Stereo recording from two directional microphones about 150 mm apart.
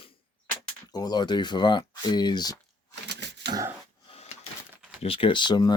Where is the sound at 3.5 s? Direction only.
25° right (ahead or behind).